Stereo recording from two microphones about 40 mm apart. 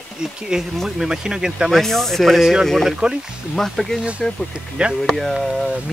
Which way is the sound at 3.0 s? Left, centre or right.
Right.